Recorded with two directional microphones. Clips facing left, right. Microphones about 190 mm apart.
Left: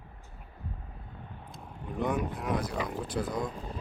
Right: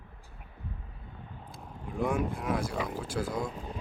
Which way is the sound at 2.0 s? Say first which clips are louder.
Right 1 dB; 5° right (ahead or behind).